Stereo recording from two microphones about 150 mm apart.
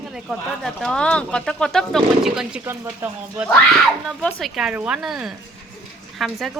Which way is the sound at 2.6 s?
15° right (ahead or behind).